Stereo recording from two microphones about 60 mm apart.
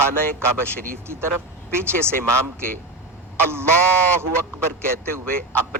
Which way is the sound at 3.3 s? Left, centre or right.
Right.